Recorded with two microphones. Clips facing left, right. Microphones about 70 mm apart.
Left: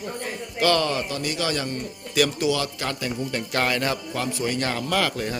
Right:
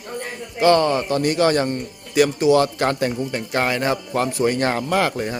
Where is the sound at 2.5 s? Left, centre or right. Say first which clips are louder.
Right 9 dB; right.